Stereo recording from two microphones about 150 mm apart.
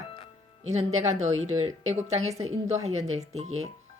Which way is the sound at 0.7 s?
50° right (ahead or behind).